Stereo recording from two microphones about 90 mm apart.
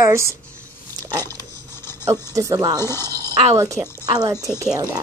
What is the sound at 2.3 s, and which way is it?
Speech, 40° right (ahead or behind).